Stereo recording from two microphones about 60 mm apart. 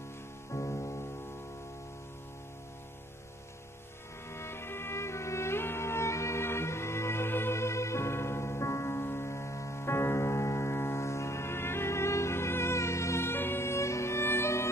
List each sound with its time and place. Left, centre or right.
0.5 s music: left
4.3 s music: left